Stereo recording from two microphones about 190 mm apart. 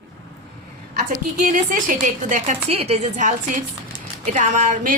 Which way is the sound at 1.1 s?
45° right (ahead or behind).